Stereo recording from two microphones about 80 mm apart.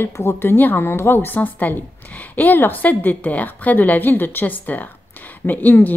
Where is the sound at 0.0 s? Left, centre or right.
Left.